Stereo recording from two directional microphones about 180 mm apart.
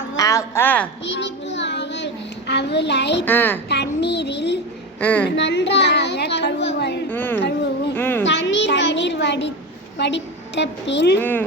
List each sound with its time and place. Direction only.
0.2 s a woman's voice: 15° left (ahead or behind)
1.0 s child singing: 80° left
2.5 s speech: 70° left (ahead or behind)
3.2 s a woman's voice: 10° left (ahead or behind)
3.7 s speech: 70° left (ahead or behind)
4.9 s a woman's voice: 10° left (ahead or behind)
5.3 s speech: 75° left (ahead or behind)
7.1 s a woman's voice: 10° left (ahead or behind)
8.2 s a sound: 85° left
10.0 s a woman's voice: 75° left (ahead or behind)
11.2 s a woman's voice: 10° left (ahead or behind)